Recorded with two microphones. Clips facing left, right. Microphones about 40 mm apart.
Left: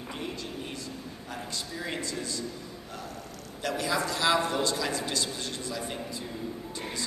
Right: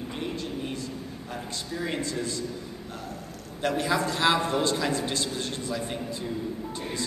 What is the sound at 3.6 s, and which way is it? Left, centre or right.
A man's voice, right.